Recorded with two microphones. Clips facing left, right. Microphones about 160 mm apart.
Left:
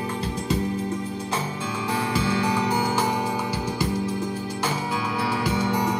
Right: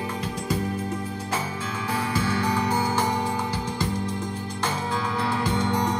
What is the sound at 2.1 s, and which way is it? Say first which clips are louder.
Music: left 1 dB; 15° left (ahead or behind).